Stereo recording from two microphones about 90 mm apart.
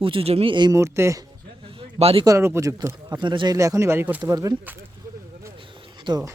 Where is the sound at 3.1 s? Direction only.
60° right (ahead or behind).